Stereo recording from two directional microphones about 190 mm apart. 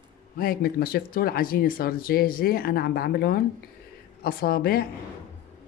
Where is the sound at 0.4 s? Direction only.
50° left (ahead or behind).